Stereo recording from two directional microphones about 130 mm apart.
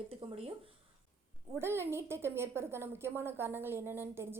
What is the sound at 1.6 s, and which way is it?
A woman's voice, 20° right (ahead or behind).